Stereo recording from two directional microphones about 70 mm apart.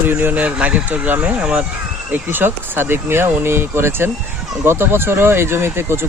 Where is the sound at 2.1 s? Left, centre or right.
Right.